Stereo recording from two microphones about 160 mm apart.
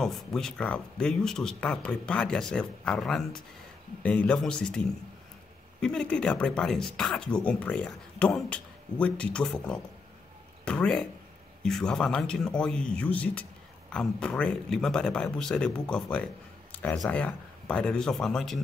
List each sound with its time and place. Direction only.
0.0 s speech: 5° left (ahead or behind)